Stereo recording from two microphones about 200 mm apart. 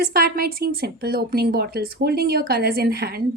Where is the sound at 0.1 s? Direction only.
50° right (ahead or behind).